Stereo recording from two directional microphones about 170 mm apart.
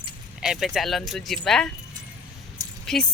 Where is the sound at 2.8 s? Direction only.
5° left (ahead or behind).